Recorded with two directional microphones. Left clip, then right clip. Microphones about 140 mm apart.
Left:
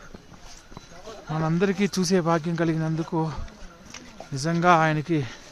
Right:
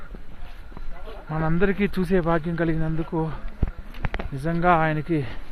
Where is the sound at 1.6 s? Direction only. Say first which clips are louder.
Right 1 dB; 5° left (ahead or behind).